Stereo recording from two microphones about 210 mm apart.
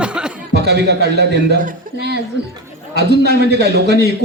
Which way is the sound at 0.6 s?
50° right (ahead or behind).